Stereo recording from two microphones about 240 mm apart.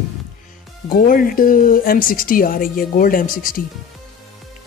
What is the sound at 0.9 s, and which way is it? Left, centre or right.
Speech, left.